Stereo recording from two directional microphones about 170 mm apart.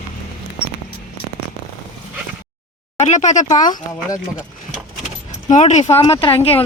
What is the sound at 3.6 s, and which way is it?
Speech, 25° left (ahead or behind).